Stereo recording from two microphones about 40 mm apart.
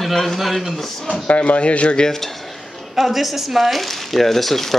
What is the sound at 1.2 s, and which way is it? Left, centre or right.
Speech, left.